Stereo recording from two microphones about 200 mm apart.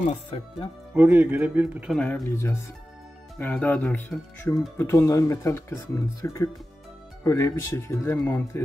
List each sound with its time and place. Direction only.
0.1 s speech: 25° left (ahead or behind)
0.9 s speech: 5° right (ahead or behind)
2.0 s speech: 5° left (ahead or behind)